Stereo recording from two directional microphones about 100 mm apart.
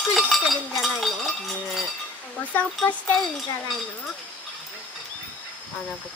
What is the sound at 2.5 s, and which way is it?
Speech, 15° left (ahead or behind).